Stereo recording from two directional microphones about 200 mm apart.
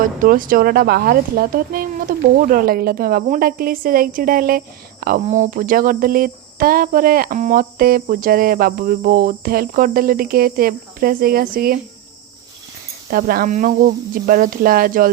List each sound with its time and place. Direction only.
0.0 s cricket: 45° right (ahead or behind)
13.1 s cricket: 45° right (ahead or behind)